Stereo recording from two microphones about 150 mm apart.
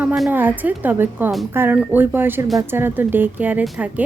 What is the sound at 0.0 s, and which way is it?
Speech, 5° right (ahead or behind).